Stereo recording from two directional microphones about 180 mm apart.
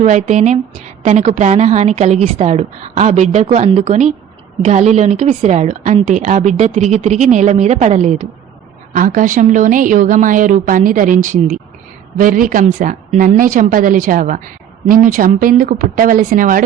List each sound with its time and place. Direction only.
0.0 s a woman's voice: 40° right (ahead or behind)